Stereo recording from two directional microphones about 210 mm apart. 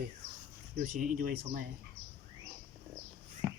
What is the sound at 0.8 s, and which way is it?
Speech, 40° right (ahead or behind).